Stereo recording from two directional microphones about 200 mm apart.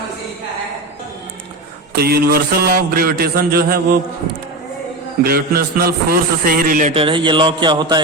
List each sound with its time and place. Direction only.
1.9 s a man's voice: 50° right (ahead or behind)
5.2 s a man's voice: 50° right (ahead or behind)
6.9 s a sound: 25° right (ahead or behind)